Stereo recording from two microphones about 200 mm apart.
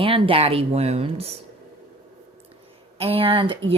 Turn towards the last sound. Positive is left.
turn(degrees=-25)  # may be behind; listen again after turning